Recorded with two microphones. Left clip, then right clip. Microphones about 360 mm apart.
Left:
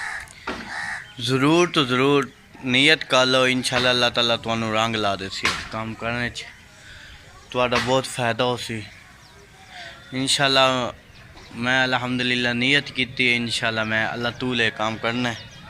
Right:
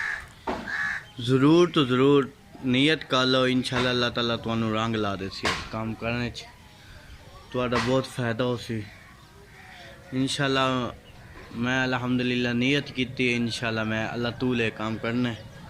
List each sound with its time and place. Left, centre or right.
1.2 s speech: centre
7.5 s speech: centre
10.2 s speech: centre